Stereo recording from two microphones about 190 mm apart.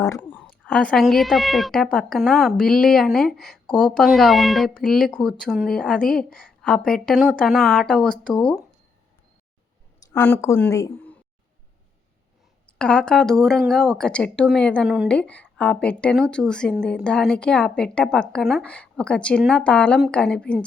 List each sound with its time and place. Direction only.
0.0 s speech: 15° left (ahead or behind)
0.7 s speech: 5° left (ahead or behind)
10.1 s speech: 10° left (ahead or behind)
12.6 s speech: 5° left (ahead or behind)